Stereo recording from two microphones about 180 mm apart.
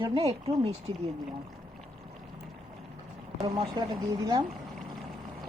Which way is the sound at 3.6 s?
25° right (ahead or behind).